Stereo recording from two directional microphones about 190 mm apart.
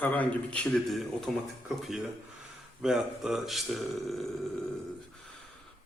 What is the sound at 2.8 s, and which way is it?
Speech, 5° right (ahead or behind).